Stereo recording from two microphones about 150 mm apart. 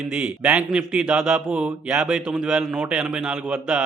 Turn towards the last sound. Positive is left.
turn(degrees=-5)  # may be behind; listen again after turning